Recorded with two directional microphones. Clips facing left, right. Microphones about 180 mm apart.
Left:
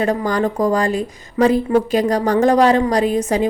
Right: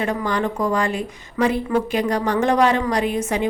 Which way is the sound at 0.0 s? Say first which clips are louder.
Left 4 dB; 40° left (ahead or behind).